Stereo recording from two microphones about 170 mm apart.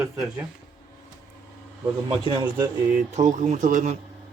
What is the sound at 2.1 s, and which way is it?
Speech, 25° right (ahead or behind).